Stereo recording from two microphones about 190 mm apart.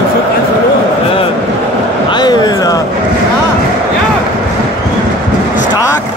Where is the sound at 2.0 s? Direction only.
20° left (ahead or behind).